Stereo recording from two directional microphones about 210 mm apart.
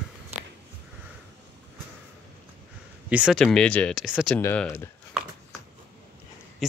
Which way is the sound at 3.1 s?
5° right (ahead or behind).